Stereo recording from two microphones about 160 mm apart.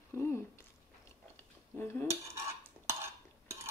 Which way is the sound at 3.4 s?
15° right (ahead or behind).